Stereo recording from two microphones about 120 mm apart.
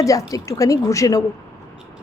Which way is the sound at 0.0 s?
30° left (ahead or behind).